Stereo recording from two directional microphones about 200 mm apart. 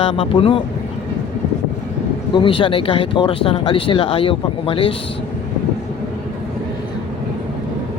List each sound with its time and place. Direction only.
0.0 s speech: 25° left (ahead or behind)
2.3 s speech: 25° left (ahead or behind)